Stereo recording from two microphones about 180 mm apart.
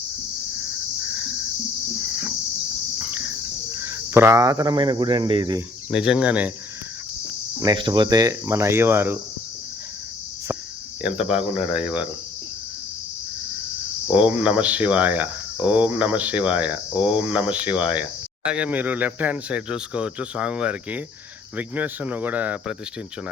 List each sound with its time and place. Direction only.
3.0 s cricket: 10° right (ahead or behind); by 5.5 s 25° right (ahead or behind)
5.9 s speech: 5° right (ahead or behind)
7.6 s speech: 25° right (ahead or behind)
11.0 s speech: 5° right (ahead or behind)
14.1 s speech: 10° right (ahead or behind)